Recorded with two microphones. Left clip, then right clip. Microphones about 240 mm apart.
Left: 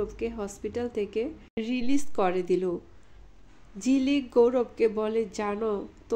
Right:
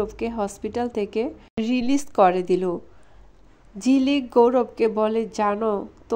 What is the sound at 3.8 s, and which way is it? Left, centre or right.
A woman's voice, centre.